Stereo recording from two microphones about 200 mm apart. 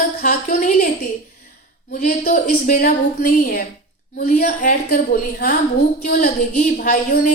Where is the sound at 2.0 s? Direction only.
45° left (ahead or behind).